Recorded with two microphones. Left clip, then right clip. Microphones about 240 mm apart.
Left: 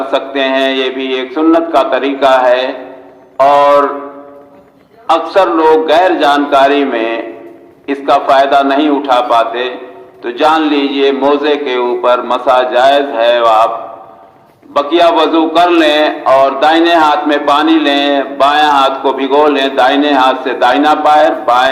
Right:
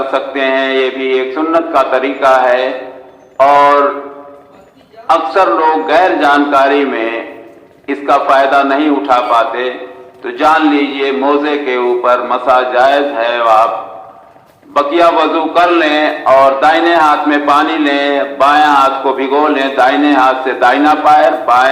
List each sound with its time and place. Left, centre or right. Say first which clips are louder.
0.1 s a man's voice: left 3 dB; left
5.0 s a man's voice: even; left
14.7 s a man's voice: even; left